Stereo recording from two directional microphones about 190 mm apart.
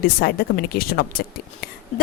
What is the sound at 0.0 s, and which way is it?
A woman's voice, 55° left (ahead or behind).